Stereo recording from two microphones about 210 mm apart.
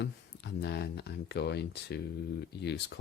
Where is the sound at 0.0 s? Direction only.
55° left (ahead or behind).